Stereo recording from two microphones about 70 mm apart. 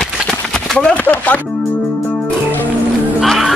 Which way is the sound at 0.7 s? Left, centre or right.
Centre.